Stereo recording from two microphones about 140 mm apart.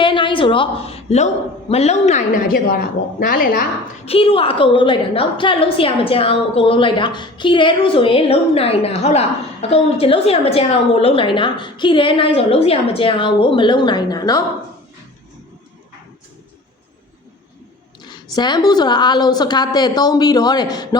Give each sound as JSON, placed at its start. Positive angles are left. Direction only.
{"t": 0.0, "sound": "a sound", "side_deg": 35}
{"t": 1.7, "sound": "a woman's voice", "side_deg": 50}
{"t": 2.5, "sound": "a woman's voice", "side_deg": 90}
{"t": 4.0, "sound": "a woman's voice", "side_deg": 45}
{"t": 18.0, "sound": "a woman's voice", "side_deg": 30}